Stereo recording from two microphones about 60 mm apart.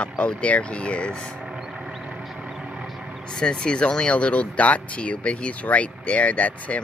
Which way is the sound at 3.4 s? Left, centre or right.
Centre.